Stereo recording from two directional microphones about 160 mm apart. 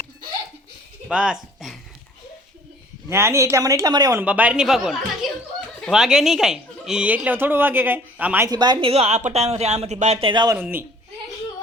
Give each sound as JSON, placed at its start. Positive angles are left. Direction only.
{"t": 1.0, "sound": "speech", "side_deg": -5}
{"t": 3.1, "sound": "speech", "side_deg": -15}
{"t": 4.2, "sound": "a woman's voice", "side_deg": -10}
{"t": 8.4, "sound": "speech", "side_deg": -25}
{"t": 10.6, "sound": "speech", "side_deg": -15}